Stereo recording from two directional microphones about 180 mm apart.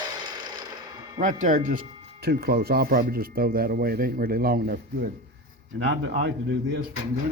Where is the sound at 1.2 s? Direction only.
45° right (ahead or behind).